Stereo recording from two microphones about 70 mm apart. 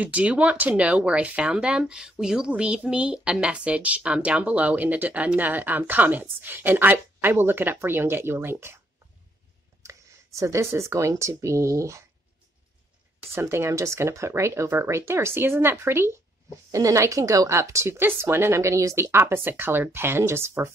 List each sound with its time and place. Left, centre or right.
0.0 s speech: centre; by 8.8 s right
9.8 s a sound: right
10.4 s speech: right
13.3 s speech: right
16.7 s speech: right
19.1 s speech: right